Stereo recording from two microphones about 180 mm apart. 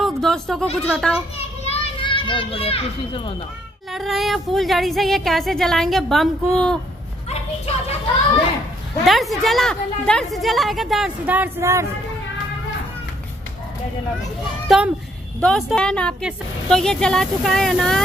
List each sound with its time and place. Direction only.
0.0 s a woman's voice: centre (ahead or behind)
1.6 s a child's voice: 30° left (ahead or behind)
3.9 s a woman's voice: centre (ahead or behind)
9.0 s a woman's voice: centre (ahead or behind); by 11.9 s 15° right (ahead or behind)
14.7 s a woman's voice: centre (ahead or behind)